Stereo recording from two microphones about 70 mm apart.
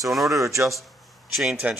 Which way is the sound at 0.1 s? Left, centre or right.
Centre.